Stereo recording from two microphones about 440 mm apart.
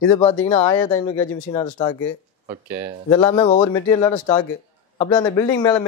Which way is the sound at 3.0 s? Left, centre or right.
Centre.